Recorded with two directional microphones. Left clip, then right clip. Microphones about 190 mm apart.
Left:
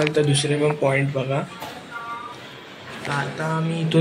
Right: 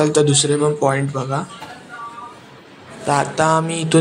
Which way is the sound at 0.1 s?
40° right (ahead or behind).